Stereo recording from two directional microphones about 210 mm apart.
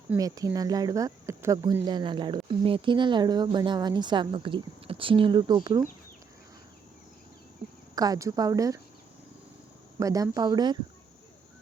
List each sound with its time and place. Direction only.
0.1 s speech: 15° right (ahead or behind)
7.9 s a woman's voice: 15° right (ahead or behind)
10.0 s a woman's voice: 15° right (ahead or behind)